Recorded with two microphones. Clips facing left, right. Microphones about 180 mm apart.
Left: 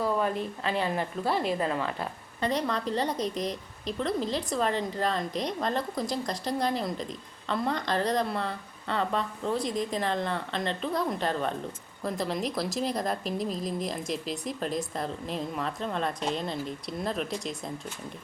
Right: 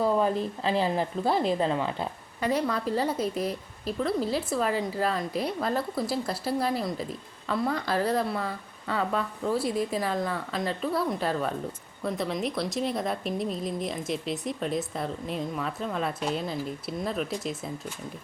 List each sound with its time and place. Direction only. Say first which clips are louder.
0.0 s speech: right 3 dB; 30° right (ahead or behind)
1.2 s speech: right 3 dB; centre (ahead or behind)
1.5 s a woman's voice: right 3 dB; 25° right (ahead or behind)
2.4 s a woman's voice: right 2 dB; 10° right (ahead or behind)